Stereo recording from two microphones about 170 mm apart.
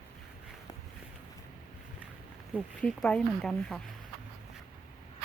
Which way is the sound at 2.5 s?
5° left (ahead or behind).